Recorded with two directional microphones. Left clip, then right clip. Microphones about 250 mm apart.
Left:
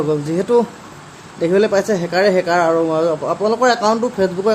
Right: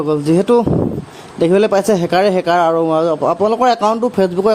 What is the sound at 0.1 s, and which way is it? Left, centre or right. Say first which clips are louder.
Speech: right 5 dB; right.